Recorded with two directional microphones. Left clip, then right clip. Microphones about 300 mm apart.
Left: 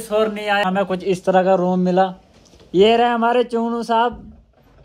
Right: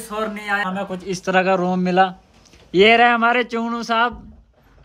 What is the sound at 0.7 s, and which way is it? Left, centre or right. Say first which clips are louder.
Speech: left 6 dB; left.